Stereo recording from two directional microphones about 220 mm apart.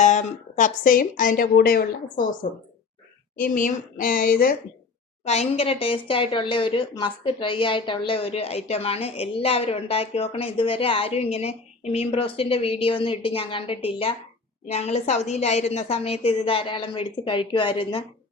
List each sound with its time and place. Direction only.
0.0 s speech: 35° left (ahead or behind)
5.2 s speech: 30° left (ahead or behind)